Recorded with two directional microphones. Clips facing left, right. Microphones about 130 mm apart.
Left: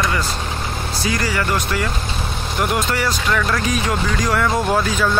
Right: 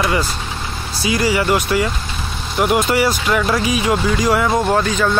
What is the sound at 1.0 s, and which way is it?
Speech, 10° right (ahead or behind).